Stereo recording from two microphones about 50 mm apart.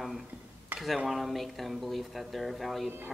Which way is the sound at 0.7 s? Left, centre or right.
Right.